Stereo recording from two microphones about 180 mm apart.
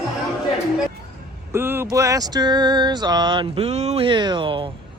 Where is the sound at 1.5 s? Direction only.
15° right (ahead or behind).